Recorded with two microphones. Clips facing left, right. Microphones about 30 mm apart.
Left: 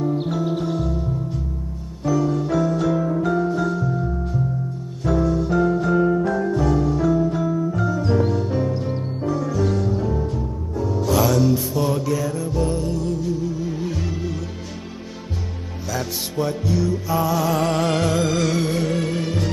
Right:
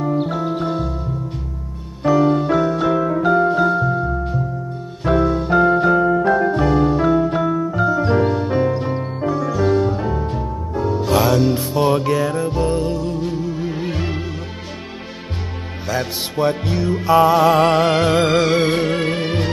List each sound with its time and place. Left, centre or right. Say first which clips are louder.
0.3 s music: right 1 dB; right
0.6 s music: right 2 dB; right
2.0 s music: right 6 dB; right
5.0 s keyboard: right 3 dB; right
6.1 s music: right 5 dB; right
9.2 s music: right 3 dB; right
15.9 s music: right 4 dB; right
16.6 s music: right 3 dB; right
17.7 s music: right 5 dB; right
18.1 s music: right 5 dB; right